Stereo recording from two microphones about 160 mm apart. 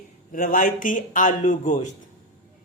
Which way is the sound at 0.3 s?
60° left (ahead or behind).